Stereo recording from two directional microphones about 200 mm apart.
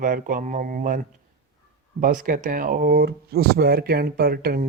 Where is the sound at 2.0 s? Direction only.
40° right (ahead or behind).